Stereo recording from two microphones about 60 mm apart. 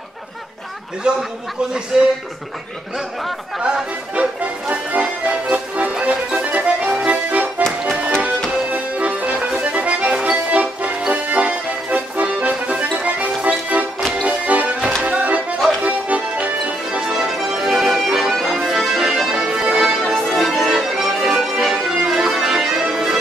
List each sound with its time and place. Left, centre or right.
1.0 s a man's voice: centre
3.6 s music: centre
8.6 s music: right
9.5 s accordion: right
14.2 s music: right
15.8 s accordion: right
17.0 s music: centre
18.7 s accordion: centre